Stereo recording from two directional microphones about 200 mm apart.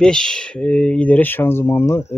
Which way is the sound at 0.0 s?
5° left (ahead or behind).